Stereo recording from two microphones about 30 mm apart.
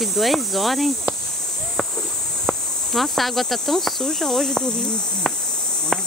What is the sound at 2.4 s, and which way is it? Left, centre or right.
Speech, centre.